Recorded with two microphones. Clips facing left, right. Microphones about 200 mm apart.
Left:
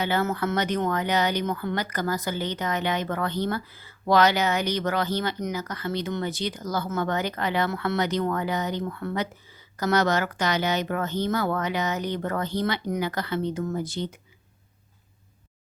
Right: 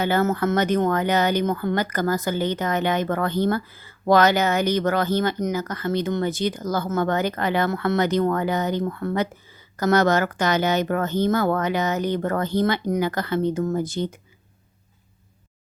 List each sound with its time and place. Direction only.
0.0 s speech: 45° right (ahead or behind)